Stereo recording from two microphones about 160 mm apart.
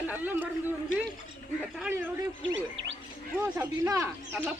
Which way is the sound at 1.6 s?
5° right (ahead or behind).